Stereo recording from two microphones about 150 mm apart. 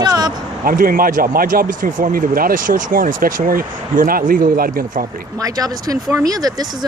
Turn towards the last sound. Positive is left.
turn(degrees=-25)  # may be behind; listen again after turning